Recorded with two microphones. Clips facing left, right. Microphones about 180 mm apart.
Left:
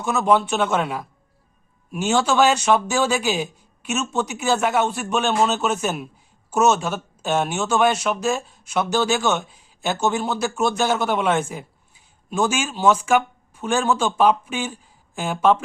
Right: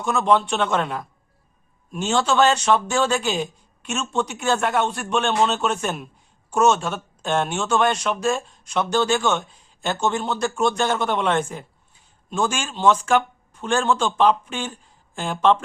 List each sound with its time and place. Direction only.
0.0 s a man's voice: 5° left (ahead or behind)